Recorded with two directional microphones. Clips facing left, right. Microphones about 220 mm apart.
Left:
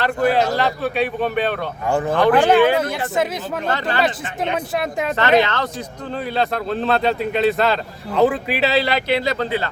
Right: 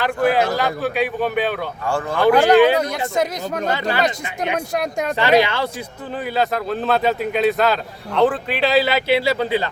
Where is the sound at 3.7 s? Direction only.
10° right (ahead or behind).